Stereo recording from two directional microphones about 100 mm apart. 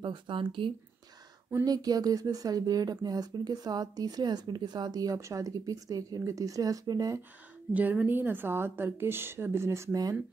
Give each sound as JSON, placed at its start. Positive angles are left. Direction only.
{"t": 0.0, "sound": "speech", "side_deg": -55}
{"t": 1.6, "sound": "speech", "side_deg": -40}
{"t": 7.7, "sound": "a woman's voice", "side_deg": -15}